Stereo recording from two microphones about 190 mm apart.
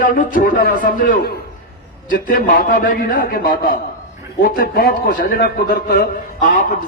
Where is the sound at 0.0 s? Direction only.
45° left (ahead or behind).